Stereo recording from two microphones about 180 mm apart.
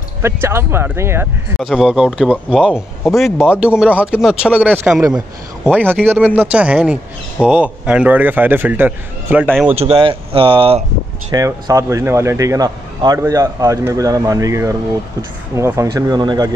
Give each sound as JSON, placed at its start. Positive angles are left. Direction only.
{"t": 0.2, "sound": "speech", "side_deg": -15}
{"t": 1.6, "sound": "speech", "side_deg": -5}
{"t": 9.7, "sound": "speech", "side_deg": -30}
{"t": 11.3, "sound": "speech", "side_deg": -20}